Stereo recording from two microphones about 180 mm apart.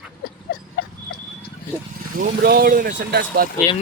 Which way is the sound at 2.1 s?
55° right (ahead or behind).